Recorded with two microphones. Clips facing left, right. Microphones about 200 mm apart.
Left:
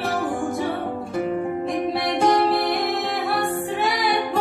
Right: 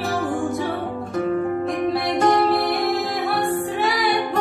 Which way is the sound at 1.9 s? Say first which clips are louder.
Right 1 dB; centre (ahead or behind).